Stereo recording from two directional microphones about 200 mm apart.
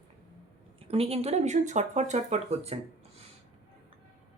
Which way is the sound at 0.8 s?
30° right (ahead or behind).